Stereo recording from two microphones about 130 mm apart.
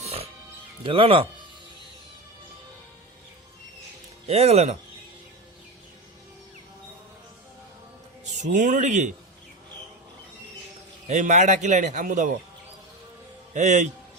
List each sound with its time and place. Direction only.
0.0 s music: 50° right (ahead or behind)
0.9 s speech: 45° right (ahead or behind)
4.3 s speech: 55° right (ahead or behind)
8.4 s a man's voice: 75° right (ahead or behind)
11.2 s a man's voice: 65° right (ahead or behind)
13.5 s a man's voice: 65° right (ahead or behind)